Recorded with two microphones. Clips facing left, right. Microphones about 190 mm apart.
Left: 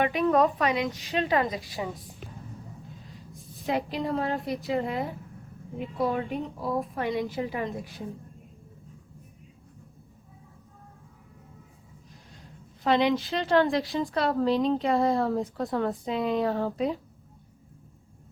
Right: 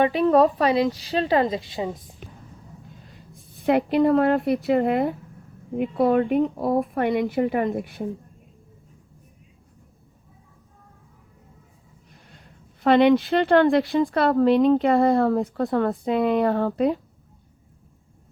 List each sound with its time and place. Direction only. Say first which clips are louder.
0.0 s a woman's voice: right 5 dB; 35° right (ahead or behind)
3.3 s a woman's voice: right 8 dB; 55° right (ahead or behind)
12.3 s a woman's voice: left 3 dB; 60° right (ahead or behind)